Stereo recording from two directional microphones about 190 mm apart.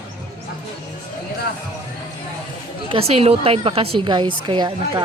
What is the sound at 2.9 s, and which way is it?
A woman's voice, 30° right (ahead or behind).